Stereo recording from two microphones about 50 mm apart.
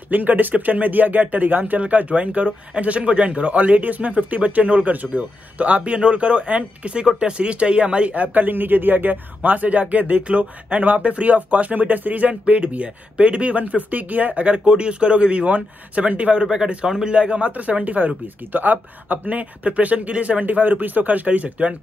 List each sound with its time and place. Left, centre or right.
0.1 s speech: right
16.4 s speech: centre